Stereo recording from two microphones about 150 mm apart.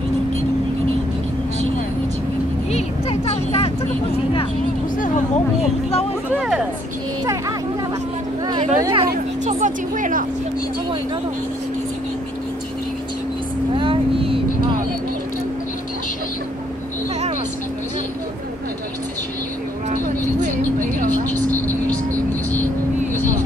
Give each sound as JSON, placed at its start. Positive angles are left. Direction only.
{"t": 2.7, "sound": "a sound", "side_deg": 40}
{"t": 4.9, "sound": "a sound", "side_deg": 60}
{"t": 8.7, "sound": "speech", "side_deg": -25}
{"t": 9.4, "sound": "speech", "side_deg": -55}
{"t": 13.7, "sound": "vehicle", "side_deg": -35}
{"t": 19.9, "sound": "vehicle", "side_deg": -55}
{"t": 21.1, "sound": "vehicle", "side_deg": 10}